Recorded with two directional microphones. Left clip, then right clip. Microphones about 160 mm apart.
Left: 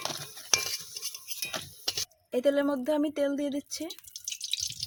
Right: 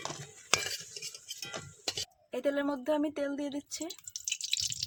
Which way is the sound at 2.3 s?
50° left (ahead or behind).